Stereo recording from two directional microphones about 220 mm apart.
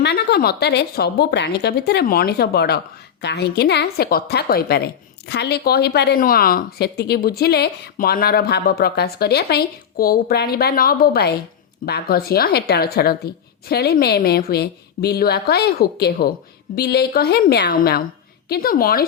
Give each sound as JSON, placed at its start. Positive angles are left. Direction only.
{"t": 0.0, "sound": "a woman's voice", "side_deg": 50}